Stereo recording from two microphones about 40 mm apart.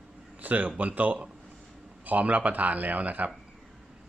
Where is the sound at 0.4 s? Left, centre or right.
Right.